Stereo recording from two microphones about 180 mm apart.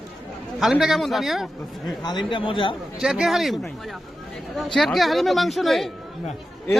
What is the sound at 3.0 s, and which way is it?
A man's voice, centre (ahead or behind).